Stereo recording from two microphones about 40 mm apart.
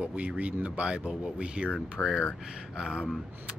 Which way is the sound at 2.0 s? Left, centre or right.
Left.